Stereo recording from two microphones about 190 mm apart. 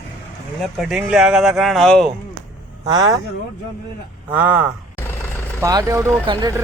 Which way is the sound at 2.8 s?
20° right (ahead or behind).